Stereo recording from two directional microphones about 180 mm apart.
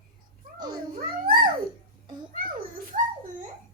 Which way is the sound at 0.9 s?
55° right (ahead or behind).